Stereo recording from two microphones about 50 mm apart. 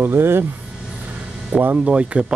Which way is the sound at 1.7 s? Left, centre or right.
Right.